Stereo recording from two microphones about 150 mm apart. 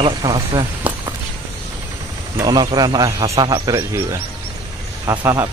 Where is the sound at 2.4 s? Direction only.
25° right (ahead or behind).